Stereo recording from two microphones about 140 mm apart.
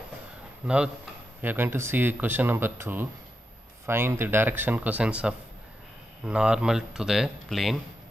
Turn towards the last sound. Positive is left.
turn(degrees=0)  # may be behind; listen again after turning